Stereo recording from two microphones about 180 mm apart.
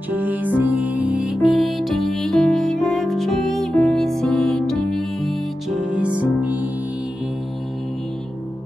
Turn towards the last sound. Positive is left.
turn(degrees=-10)  # may be behind; listen again after turning